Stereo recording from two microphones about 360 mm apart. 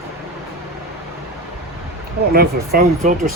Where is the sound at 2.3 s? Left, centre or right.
Right.